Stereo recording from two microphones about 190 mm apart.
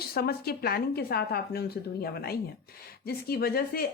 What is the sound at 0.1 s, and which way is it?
A woman's voice, 55° left (ahead or behind).